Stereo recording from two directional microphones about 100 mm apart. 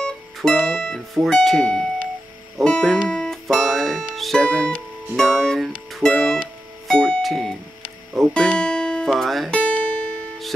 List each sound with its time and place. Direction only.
0.0 s speech: 10° left (ahead or behind)
4.1 s music: centre (ahead or behind)
5.1 s speech: centre (ahead or behind)
5.9 s music: centre (ahead or behind)
9.6 s music: 15° left (ahead or behind)